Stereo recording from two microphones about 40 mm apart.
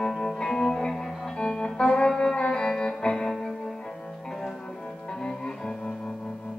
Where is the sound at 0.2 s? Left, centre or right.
Centre.